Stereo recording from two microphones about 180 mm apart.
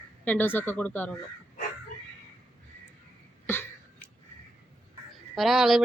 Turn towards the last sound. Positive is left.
turn(degrees=0)  # may be behind; listen again after turning